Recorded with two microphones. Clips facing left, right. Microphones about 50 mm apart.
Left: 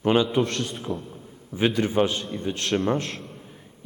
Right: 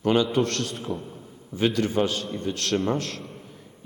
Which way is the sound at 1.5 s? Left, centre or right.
Centre.